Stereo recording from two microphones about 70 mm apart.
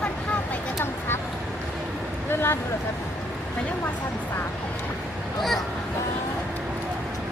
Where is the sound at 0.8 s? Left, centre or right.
Left.